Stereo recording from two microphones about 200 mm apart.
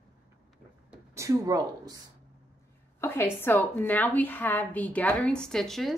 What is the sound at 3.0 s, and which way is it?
A woman's voice, 10° left (ahead or behind).